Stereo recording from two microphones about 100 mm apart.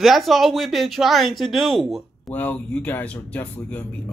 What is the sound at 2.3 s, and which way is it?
Speech, 20° left (ahead or behind).